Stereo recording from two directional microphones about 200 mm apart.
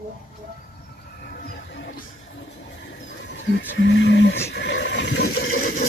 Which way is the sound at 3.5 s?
60° left (ahead or behind).